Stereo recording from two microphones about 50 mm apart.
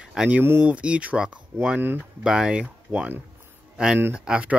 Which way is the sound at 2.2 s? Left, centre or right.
Centre.